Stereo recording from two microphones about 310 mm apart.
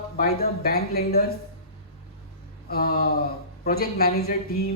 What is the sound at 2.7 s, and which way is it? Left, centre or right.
Speech, left.